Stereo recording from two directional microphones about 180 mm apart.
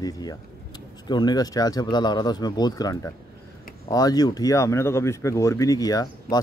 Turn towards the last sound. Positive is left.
turn(degrees=20)  # may be behind; listen again after turning